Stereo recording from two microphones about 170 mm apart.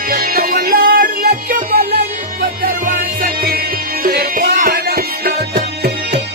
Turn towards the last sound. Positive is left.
turn(degrees=-60)  # may be behind; listen again after turning